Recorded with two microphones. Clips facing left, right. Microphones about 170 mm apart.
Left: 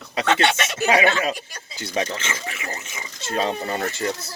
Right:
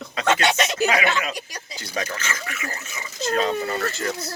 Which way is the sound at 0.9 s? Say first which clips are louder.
Left 4 dB; 30° left (ahead or behind).